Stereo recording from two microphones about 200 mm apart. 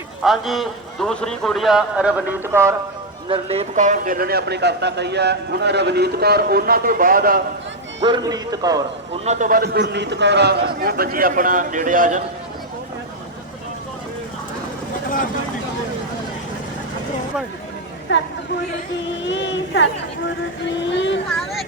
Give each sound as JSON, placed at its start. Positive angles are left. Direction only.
{"t": 0.2, "sound": "a man's voice", "side_deg": 0}
{"t": 3.2, "sound": "a man's voice", "side_deg": -30}
{"t": 8.0, "sound": "a man's voice", "side_deg": -20}
{"t": 9.2, "sound": "a man's voice", "side_deg": -35}
{"t": 18.1, "sound": "speech", "side_deg": 65}
{"t": 19.3, "sound": "speech", "side_deg": 65}
{"t": 20.9, "sound": "speech", "side_deg": 65}